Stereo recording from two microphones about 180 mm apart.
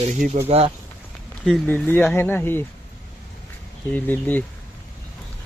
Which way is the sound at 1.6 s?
10° left (ahead or behind).